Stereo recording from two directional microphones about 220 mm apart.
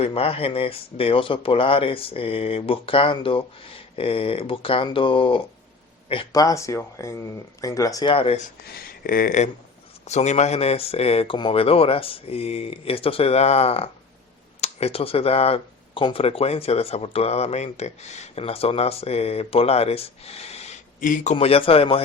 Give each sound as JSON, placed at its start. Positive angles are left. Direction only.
{"t": 0.0, "sound": "speech", "side_deg": 25}
{"t": 8.7, "sound": "speech", "side_deg": 40}